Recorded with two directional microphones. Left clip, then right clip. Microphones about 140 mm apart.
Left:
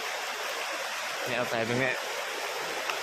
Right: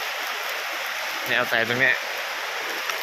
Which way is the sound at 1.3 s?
Centre (ahead or behind).